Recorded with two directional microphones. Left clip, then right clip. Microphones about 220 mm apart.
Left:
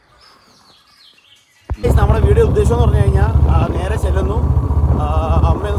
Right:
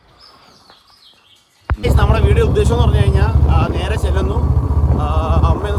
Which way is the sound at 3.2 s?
25° left (ahead or behind).